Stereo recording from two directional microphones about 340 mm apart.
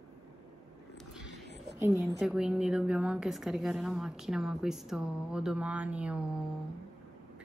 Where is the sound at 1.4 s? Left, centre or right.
Right.